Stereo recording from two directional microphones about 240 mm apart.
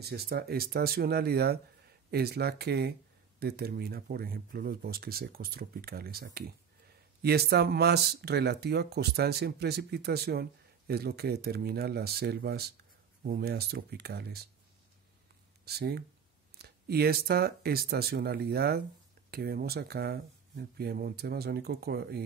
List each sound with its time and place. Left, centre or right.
0.0 s speech: right
15.6 s speech: right